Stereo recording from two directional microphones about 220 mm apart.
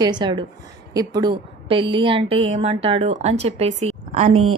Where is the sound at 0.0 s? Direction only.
20° right (ahead or behind).